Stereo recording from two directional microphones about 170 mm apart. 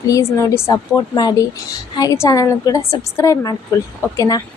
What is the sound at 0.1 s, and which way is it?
A woman's voice, 15° left (ahead or behind).